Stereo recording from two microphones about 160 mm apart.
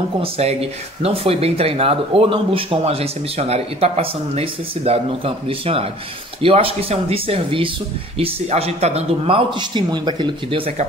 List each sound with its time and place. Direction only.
0.2 s speech: 40° right (ahead or behind)